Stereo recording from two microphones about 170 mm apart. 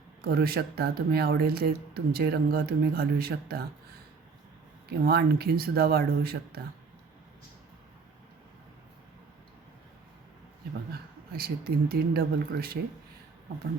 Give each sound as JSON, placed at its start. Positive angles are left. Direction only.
{"t": 0.2, "sound": "speech", "side_deg": -60}
{"t": 4.9, "sound": "speech", "side_deg": -65}
{"t": 11.3, "sound": "speech", "side_deg": -65}